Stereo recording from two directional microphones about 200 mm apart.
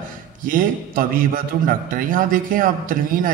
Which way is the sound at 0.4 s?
45° right (ahead or behind).